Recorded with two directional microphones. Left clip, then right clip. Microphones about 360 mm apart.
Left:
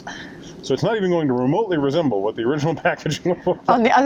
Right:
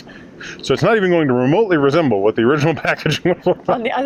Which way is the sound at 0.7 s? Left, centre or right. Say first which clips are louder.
Right 5 dB; right.